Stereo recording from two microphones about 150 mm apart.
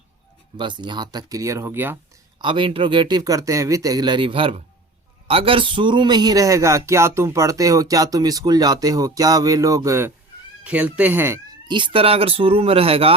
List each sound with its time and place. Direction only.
0.5 s speech: 30° right (ahead or behind); by 2.0 s 15° right (ahead or behind)
2.4 s speech: 35° right (ahead or behind)
10.6 s speech: 10° right (ahead or behind)
11.7 s speech: 35° right (ahead or behind)